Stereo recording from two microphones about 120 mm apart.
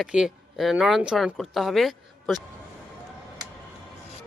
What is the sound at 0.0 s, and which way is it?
Speech, 5° right (ahead or behind).